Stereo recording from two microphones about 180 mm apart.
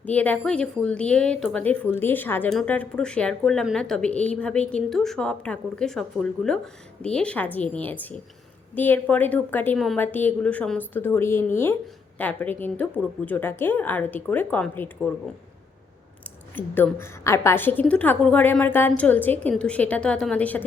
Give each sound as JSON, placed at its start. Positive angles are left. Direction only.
{"t": 0.0, "sound": "a woman's voice", "side_deg": 10}
{"t": 16.6, "sound": "a woman's voice", "side_deg": 10}